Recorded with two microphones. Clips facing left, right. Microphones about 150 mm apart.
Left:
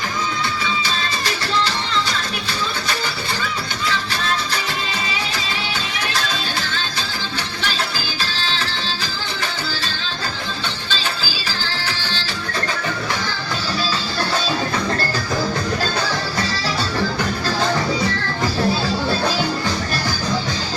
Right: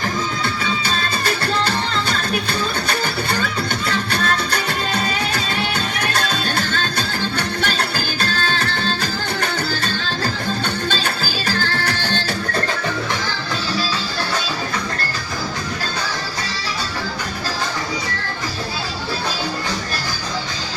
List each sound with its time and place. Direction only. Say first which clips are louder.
0.9 s music: right 2 dB; 50° right (ahead or behind)
3.4 s music: right 2 dB; 55° right (ahead or behind)
6.1 s music: right 3 dB; 55° right (ahead or behind)
10.8 s music: right 3 dB; 55° right (ahead or behind)